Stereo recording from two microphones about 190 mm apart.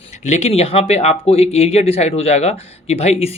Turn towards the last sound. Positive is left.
turn(degrees=35)  # may be behind; listen again after turning